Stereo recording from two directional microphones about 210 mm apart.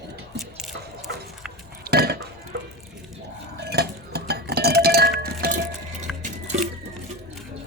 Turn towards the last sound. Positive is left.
turn(degrees=-35)  # may be behind; listen again after turning